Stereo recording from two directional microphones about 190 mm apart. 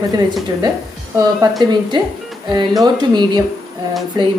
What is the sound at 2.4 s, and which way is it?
Speech, 20° right (ahead or behind).